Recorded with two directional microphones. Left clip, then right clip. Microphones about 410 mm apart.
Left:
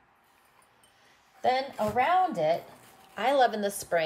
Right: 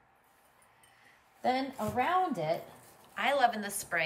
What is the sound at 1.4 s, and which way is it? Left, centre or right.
Speech, left.